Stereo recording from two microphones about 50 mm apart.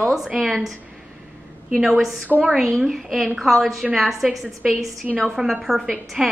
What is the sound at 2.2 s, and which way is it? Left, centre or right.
Speech, right.